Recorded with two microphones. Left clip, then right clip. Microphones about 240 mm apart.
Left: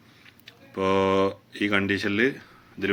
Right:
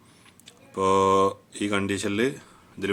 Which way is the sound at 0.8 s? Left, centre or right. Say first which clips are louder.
Right 2 dB; centre.